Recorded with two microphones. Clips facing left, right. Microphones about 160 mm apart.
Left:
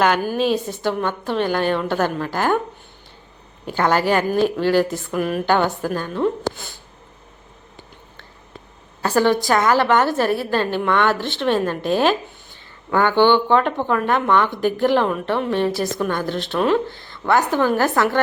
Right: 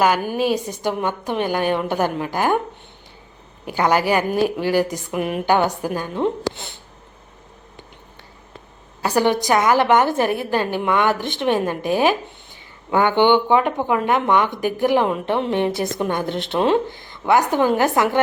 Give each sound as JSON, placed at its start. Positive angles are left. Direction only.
{"t": 0.0, "sound": "a woman's voice", "side_deg": -10}
{"t": 3.7, "sound": "a woman's voice", "side_deg": -10}
{"t": 9.0, "sound": "a woman's voice", "side_deg": -15}